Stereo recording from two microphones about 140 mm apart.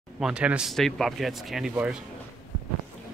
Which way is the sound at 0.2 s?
5° right (ahead or behind).